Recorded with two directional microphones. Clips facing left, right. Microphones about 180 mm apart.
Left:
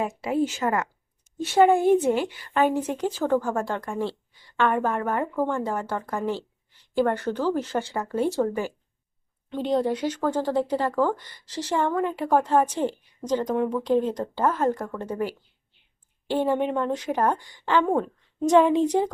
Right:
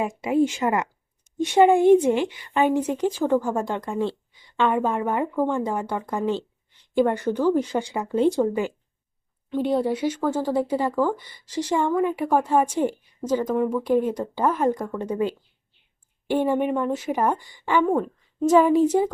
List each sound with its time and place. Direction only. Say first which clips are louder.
0.2 s speech: right 6 dB; 10° right (ahead or behind)
2.0 s a woman's voice: right 2 dB; 5° left (ahead or behind)
2.8 s speech: right 3 dB; 10° right (ahead or behind)